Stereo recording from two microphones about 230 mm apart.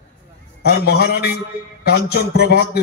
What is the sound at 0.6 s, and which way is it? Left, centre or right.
A man's voice, left.